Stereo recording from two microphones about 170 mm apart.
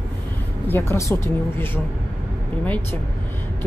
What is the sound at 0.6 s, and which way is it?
Speech, 15° left (ahead or behind).